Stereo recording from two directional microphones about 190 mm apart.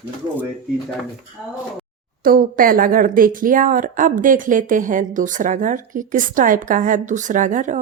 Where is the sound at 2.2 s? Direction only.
45° right (ahead or behind).